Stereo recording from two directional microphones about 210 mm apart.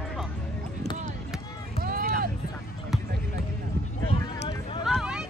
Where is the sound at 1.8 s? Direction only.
45° right (ahead or behind).